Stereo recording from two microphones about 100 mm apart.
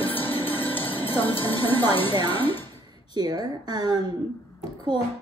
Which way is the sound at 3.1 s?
45° right (ahead or behind).